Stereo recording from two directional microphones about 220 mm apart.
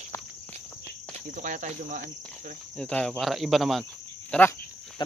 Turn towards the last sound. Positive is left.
turn(degrees=10)  # may be behind; listen again after turning